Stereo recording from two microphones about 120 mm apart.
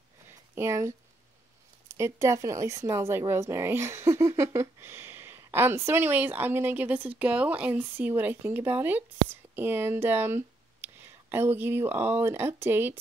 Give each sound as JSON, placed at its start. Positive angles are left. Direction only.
{"t": 0.6, "sound": "speech", "side_deg": -25}
{"t": 2.0, "sound": "speech", "side_deg": -25}